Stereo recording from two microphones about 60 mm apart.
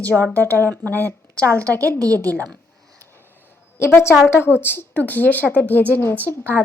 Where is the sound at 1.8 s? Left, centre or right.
Right.